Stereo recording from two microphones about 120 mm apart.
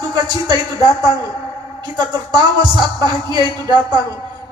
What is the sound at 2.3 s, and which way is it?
A woman's voice, 35° right (ahead or behind).